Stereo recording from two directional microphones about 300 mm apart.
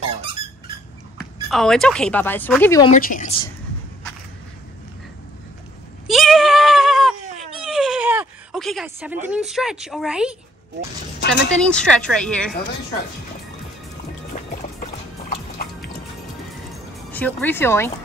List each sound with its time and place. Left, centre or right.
1.1 s speech: centre
2.9 s a woman's voice: left
6.0 s bleat: centre
7.5 s a sound: centre
11.5 s speech: centre
14.5 s music: left
17.1 s speech: centre